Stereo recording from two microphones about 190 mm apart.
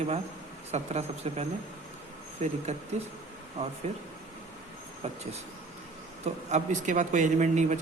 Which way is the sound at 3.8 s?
35° right (ahead or behind).